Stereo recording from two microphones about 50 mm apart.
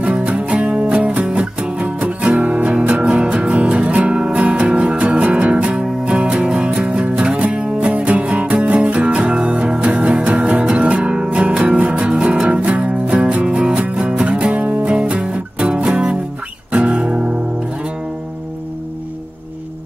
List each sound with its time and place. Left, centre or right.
0.0 s music: right